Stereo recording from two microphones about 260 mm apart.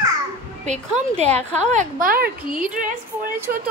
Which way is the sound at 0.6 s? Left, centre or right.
Right.